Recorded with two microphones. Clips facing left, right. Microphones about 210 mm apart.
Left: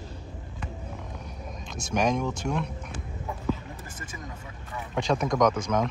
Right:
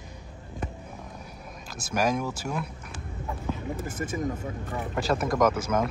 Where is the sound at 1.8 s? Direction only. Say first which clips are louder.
Left 1 dB; 5° right (ahead or behind).